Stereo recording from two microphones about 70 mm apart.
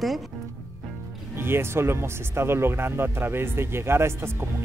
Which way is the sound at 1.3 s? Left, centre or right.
Right.